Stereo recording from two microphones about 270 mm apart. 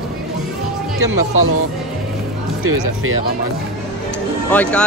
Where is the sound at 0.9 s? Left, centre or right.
Right.